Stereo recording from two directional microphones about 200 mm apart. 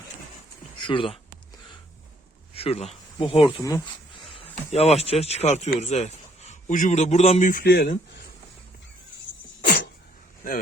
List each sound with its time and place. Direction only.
0.8 s speech: 25° left (ahead or behind)
2.5 s speech: 30° left (ahead or behind); by 8.2 s 50° left (ahead or behind)